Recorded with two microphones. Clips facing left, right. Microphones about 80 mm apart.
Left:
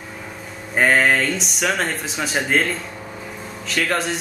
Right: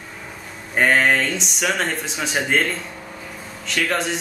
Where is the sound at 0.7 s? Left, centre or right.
Centre.